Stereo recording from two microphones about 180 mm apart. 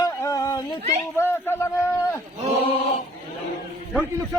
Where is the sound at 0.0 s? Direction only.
20° left (ahead or behind).